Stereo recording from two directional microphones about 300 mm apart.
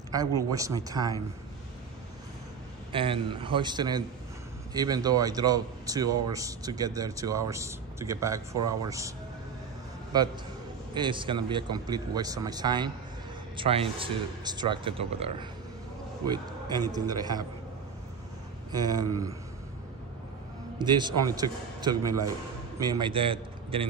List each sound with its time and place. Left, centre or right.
0.4 s a man's voice: centre
2.9 s a man's voice: centre
10.1 s a man's voice: centre
18.7 s a man's voice: centre
20.8 s a man's voice: centre